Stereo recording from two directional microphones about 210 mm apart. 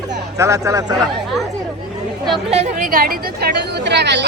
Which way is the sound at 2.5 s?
35° right (ahead or behind).